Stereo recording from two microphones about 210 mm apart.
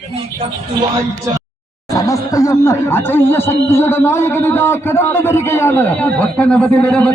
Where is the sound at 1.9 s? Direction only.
15° left (ahead or behind).